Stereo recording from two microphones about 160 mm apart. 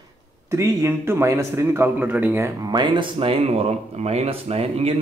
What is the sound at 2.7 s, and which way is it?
Speech, 30° right (ahead or behind).